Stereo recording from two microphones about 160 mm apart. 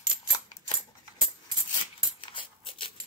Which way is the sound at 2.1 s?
35° left (ahead or behind).